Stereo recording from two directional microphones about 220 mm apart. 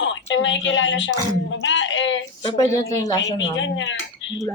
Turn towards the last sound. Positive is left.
turn(degrees=55)  # may be behind; listen again after turning